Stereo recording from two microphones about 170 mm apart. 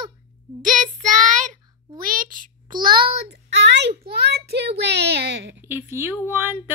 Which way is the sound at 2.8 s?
60° right (ahead or behind).